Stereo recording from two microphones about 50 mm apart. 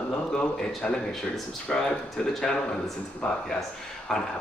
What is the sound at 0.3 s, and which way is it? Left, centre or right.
A man's voice, centre.